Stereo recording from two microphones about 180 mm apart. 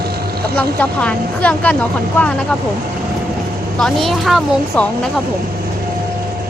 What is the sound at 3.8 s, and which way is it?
A woman's voice, centre (ahead or behind).